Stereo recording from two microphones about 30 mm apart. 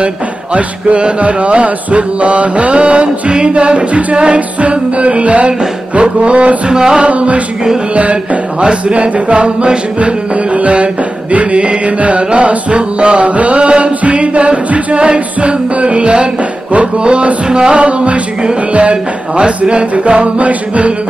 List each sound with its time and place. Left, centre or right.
0.6 s music: right
6.7 s music: right
7.0 s music: right
17.5 s music: right
17.7 s music: right
20.1 s music: right